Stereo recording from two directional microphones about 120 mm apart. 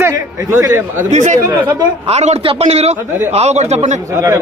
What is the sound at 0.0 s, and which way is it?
A man's voice, 30° right (ahead or behind).